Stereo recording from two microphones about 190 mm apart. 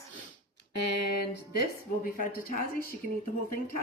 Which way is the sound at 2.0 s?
50° left (ahead or behind).